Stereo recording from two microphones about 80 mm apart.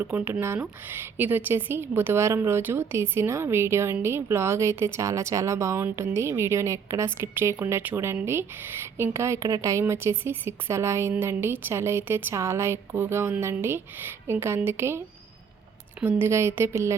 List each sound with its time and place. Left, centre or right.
0.0 s a woman's voice: right
16.0 s a woman's voice: right